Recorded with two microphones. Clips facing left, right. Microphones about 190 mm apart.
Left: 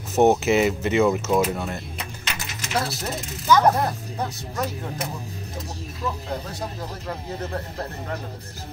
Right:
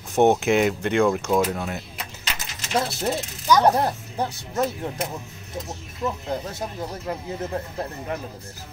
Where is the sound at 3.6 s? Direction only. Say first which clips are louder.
Right 1 dB; 30° right (ahead or behind).